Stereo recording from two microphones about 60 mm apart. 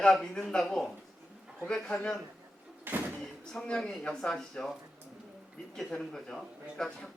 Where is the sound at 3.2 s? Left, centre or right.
Centre.